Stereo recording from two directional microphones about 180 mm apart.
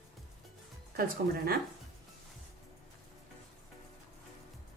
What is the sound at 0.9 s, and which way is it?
Speech, 55° right (ahead or behind).